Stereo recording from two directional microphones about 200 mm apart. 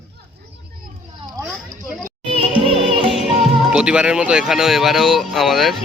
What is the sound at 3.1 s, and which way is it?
Speech, centre (ahead or behind).